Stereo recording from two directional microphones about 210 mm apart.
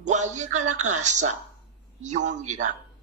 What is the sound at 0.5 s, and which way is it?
Speech, 90° right.